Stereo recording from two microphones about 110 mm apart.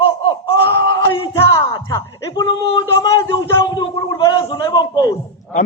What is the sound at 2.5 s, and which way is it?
Speech, 55° left (ahead or behind).